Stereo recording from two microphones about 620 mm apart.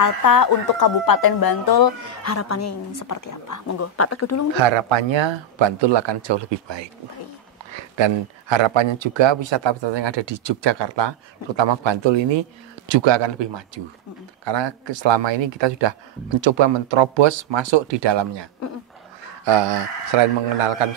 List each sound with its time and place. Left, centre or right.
0.0 s speech: left
4.6 s speech: right